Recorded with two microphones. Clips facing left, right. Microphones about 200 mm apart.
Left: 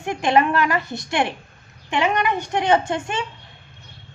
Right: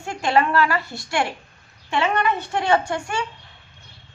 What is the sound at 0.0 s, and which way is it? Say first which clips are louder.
A woman's voice: left 2 dB; 20° left (ahead or behind).